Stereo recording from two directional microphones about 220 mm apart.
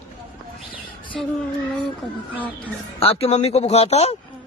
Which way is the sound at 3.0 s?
25° left (ahead or behind).